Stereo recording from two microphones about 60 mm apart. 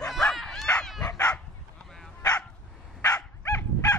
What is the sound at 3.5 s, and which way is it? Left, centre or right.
Dog, left.